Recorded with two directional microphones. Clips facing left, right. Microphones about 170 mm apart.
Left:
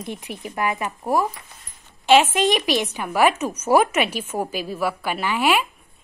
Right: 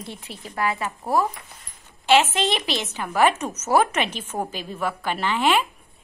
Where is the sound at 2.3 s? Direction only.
15° left (ahead or behind).